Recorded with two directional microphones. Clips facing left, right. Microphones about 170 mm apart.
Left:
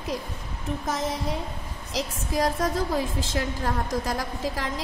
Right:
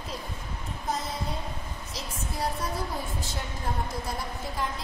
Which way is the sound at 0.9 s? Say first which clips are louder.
Left 3 dB; 90° left.